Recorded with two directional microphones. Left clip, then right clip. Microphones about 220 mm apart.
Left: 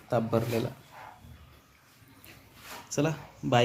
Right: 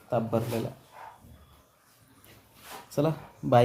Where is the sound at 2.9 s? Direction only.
25° right (ahead or behind).